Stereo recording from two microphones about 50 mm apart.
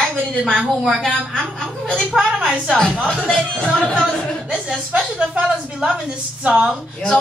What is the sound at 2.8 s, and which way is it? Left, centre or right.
Speech, centre.